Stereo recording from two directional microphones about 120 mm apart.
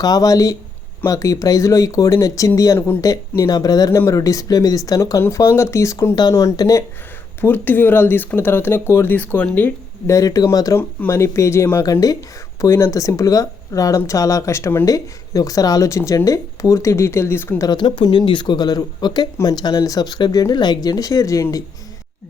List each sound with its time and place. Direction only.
0.0 s speech: 30° left (ahead or behind)
3.0 s speech: 30° left (ahead or behind)
7.4 s speech: 15° left (ahead or behind)
10.2 s speech: 30° left (ahead or behind)
17.7 s speech: 40° left (ahead or behind)